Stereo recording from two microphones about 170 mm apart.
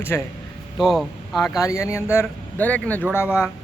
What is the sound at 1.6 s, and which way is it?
A man's voice, 15° left (ahead or behind).